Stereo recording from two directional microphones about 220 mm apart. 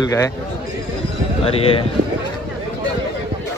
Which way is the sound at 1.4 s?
25° left (ahead or behind).